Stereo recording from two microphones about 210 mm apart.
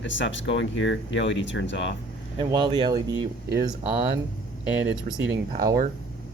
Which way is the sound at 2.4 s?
20° right (ahead or behind).